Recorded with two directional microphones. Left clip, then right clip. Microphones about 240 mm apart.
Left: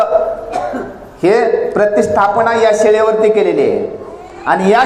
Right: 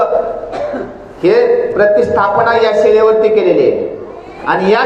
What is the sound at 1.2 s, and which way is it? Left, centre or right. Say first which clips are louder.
A man's voice: right 2 dB; left.